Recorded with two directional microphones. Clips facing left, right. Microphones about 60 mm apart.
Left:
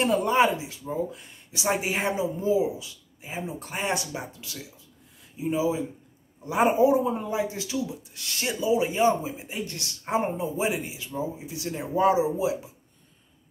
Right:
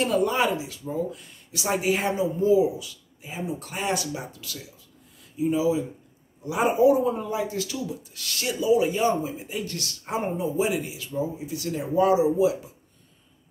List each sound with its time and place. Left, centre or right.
0.0 s speech: left